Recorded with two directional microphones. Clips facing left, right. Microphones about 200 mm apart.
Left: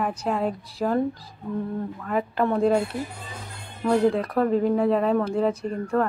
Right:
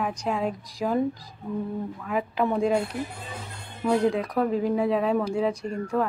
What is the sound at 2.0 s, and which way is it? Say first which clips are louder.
Speech: left 2 dB; 5° right (ahead or behind).